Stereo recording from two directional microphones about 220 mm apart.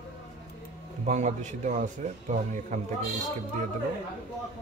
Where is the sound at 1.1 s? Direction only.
35° right (ahead or behind).